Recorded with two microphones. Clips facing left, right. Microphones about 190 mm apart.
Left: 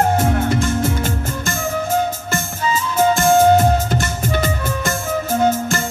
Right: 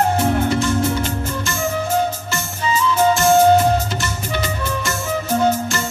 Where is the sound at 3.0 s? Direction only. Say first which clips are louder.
Left 1 dB; 50° left (ahead or behind).